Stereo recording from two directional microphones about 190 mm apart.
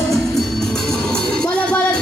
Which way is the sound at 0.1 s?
Centre (ahead or behind).